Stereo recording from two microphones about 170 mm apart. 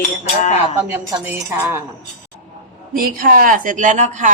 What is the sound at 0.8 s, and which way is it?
A woman's voice, 15° right (ahead or behind).